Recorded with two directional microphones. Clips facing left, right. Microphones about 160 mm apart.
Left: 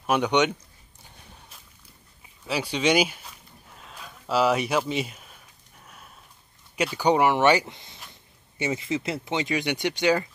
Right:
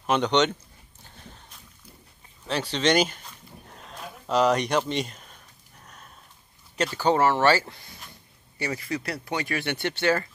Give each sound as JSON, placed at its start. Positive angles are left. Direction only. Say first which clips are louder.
{"t": 0.0, "sound": "speech", "louder": "even", "side_deg": 10}
{"t": 1.0, "sound": "a sound", "louder": "right 2 dB", "side_deg": 10}
{"t": 6.8, "sound": "speech", "louder": "left 1 dB", "side_deg": 10}